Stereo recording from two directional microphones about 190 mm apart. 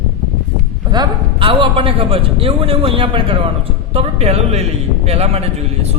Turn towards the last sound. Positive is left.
turn(degrees=-35)  # may be behind; listen again after turning